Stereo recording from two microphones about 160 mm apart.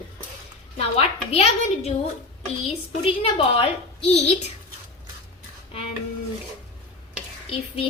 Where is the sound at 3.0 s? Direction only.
35° left (ahead or behind).